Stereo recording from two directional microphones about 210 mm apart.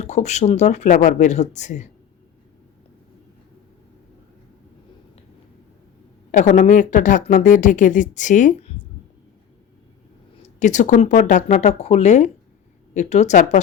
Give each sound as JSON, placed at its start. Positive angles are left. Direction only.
{"t": 0.0, "sound": "speech", "side_deg": 30}
{"t": 6.3, "sound": "speech", "side_deg": 35}
{"t": 10.4, "sound": "speech", "side_deg": 35}